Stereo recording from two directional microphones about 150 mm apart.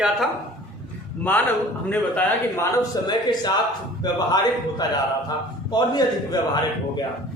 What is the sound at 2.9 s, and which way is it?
A man's voice, 25° left (ahead or behind).